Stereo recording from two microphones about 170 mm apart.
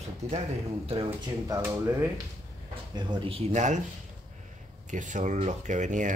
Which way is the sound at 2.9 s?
25° right (ahead or behind).